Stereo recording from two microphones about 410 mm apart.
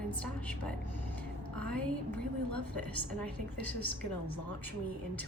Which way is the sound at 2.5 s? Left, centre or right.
Left.